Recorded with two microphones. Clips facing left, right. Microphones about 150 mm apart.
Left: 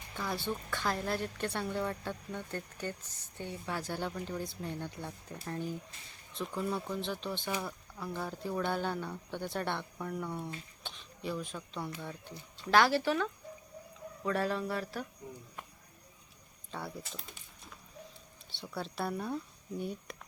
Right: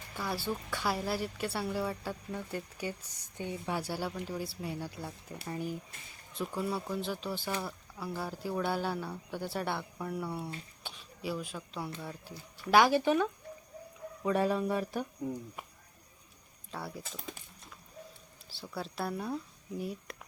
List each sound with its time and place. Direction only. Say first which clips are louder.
0.2 s a woman's voice: right 1 dB; 5° right (ahead or behind)
12.3 s speech: right 1 dB; 20° left (ahead or behind)
12.7 s a woman's voice: right 2 dB; 15° right (ahead or behind)
16.7 s speech: even; centre (ahead or behind)